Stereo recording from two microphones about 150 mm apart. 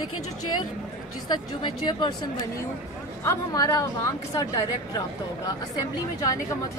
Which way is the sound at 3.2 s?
25° left (ahead or behind).